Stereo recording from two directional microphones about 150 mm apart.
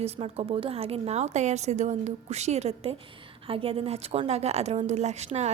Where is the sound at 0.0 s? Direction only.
40° right (ahead or behind).